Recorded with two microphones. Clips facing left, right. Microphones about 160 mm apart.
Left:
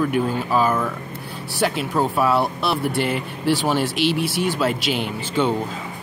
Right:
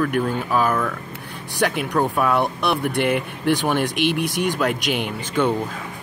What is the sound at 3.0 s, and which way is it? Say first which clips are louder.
Speech: right 1 dB; 60° right (ahead or behind).